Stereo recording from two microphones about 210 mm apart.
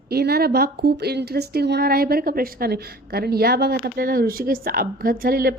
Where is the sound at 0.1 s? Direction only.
50° right (ahead or behind).